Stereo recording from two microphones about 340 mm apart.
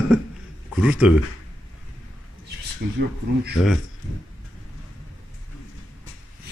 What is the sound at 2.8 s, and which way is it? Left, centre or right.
Speech, right.